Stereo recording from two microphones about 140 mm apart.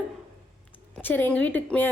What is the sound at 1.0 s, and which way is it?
Speech, 15° left (ahead or behind).